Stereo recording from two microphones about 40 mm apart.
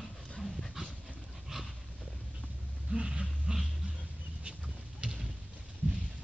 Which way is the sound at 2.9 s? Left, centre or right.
Right.